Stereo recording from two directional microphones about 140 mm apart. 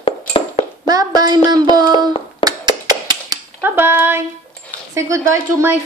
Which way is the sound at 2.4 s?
30° right (ahead or behind).